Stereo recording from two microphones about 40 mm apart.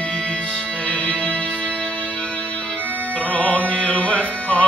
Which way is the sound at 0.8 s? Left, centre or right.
Left.